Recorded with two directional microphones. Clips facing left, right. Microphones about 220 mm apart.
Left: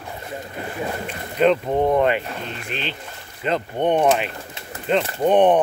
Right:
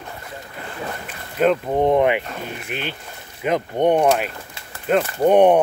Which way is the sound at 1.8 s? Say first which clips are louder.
Right 3 dB; 15° right (ahead or behind).